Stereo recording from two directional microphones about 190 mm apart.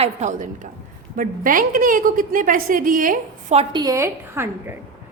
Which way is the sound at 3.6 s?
25° right (ahead or behind).